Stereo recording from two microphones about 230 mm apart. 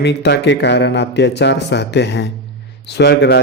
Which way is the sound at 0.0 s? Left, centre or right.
Left.